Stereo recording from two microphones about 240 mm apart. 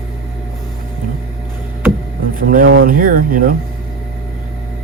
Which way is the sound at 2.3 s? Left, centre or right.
Right.